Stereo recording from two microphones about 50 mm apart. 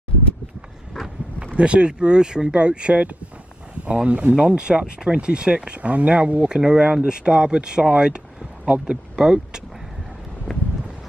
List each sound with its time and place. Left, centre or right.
1.4 s speech: right